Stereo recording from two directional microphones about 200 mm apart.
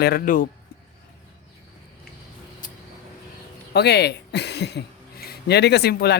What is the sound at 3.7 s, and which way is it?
Speech, 55° left (ahead or behind).